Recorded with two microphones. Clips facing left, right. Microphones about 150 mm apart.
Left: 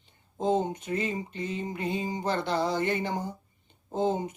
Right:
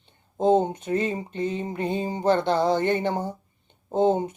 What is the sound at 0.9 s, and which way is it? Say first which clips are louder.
Speech: right 5 dB; 30° right (ahead or behind).